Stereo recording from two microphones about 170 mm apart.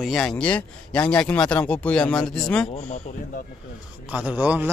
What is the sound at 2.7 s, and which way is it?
Speech, 40° left (ahead or behind).